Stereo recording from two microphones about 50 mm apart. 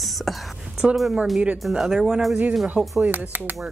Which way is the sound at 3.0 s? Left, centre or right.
Right.